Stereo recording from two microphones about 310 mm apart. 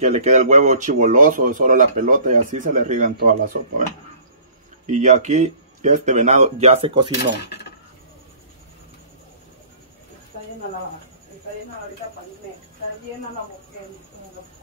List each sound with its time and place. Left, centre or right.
0.0 s speech: right
4.8 s speech: right